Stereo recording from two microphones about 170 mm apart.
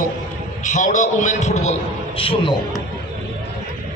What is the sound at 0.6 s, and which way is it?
A man's voice, 45° left (ahead or behind).